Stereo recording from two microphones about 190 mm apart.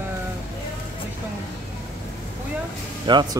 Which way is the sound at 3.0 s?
25° right (ahead or behind).